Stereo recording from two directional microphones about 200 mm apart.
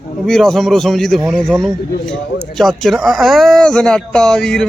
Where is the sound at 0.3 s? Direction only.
Centre (ahead or behind).